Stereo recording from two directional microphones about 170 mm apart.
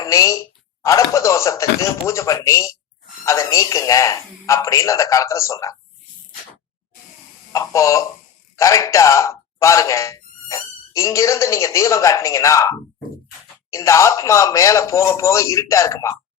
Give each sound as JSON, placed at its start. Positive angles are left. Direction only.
{"t": 0.0, "sound": "a woman's voice", "side_deg": 20}
{"t": 7.5, "sound": "speech", "side_deg": 15}